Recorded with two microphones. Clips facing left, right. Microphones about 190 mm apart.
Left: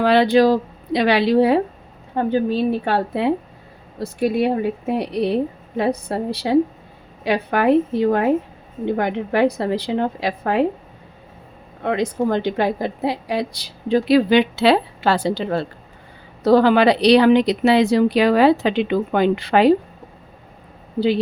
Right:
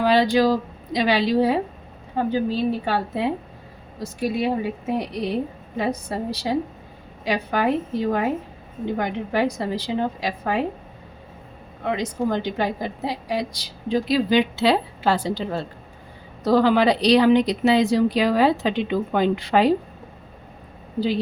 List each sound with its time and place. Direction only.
0.0 s a woman's voice: 60° left (ahead or behind)
11.8 s a woman's voice: 55° left (ahead or behind)